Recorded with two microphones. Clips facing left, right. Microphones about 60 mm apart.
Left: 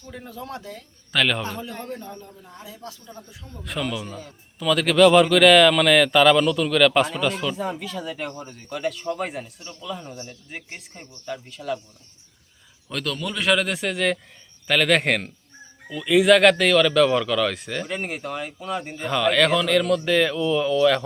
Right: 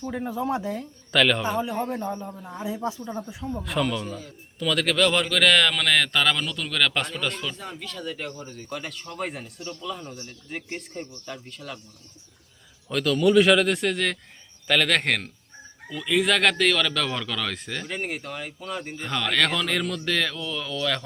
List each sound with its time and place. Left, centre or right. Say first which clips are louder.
0.1 s speech: right 7 dB; right
1.1 s a man's voice: right 1 dB; centre
1.5 s speech: right 6 dB; centre
3.6 s a man's voice: right 1 dB; centre
9.6 s a man's voice: right 5 dB; left
9.8 s a man's voice: left 4 dB; centre
12.9 s a man's voice: right 9 dB; centre